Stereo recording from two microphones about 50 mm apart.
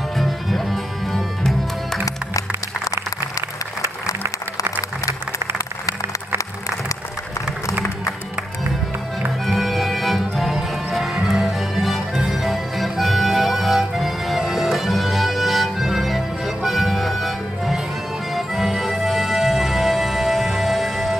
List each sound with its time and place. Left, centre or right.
0.2 s music: centre
4.2 s applause: right
9.5 s music: centre